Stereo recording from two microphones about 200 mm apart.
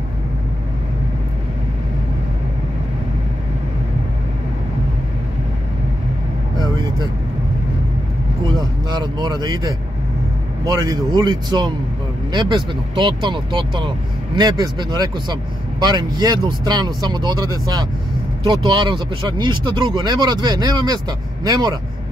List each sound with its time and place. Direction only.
8.5 s vehicle: 20° right (ahead or behind)
10.6 s speech: 20° right (ahead or behind)